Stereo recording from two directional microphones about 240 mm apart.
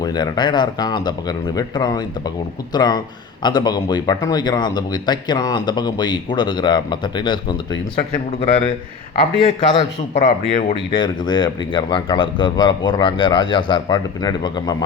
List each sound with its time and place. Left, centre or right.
0.0 s a man's voice: centre